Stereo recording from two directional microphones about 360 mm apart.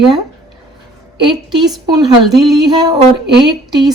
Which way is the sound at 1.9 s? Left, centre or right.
Centre.